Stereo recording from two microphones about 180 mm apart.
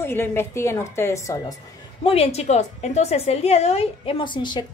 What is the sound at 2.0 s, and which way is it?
A woman's voice, 35° left (ahead or behind).